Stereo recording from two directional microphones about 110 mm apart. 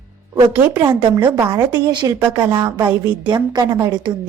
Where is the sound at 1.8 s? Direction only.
40° right (ahead or behind).